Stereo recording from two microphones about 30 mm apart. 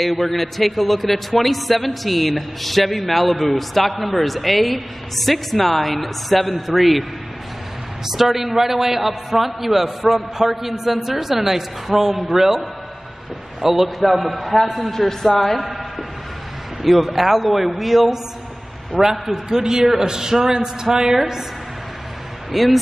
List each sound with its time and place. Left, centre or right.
0.0 s a man's voice: centre
8.1 s a man's voice: centre
13.6 s a man's voice: centre
16.8 s a man's voice: centre
19.2 s a man's voice: centre
22.5 s a man's voice: centre